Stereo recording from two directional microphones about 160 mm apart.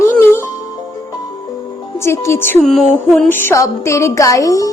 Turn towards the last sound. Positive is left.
turn(degrees=20)  # may be behind; listen again after turning